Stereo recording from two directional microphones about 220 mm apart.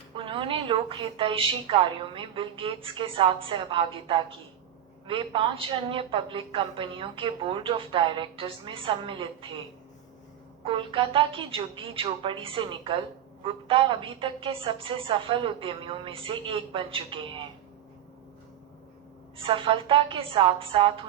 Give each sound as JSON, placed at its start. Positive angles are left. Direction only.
{"t": 0.2, "sound": "a woman's voice", "side_deg": -25}
{"t": 10.6, "sound": "a woman's voice", "side_deg": -25}
{"t": 19.4, "sound": "a woman's voice", "side_deg": -25}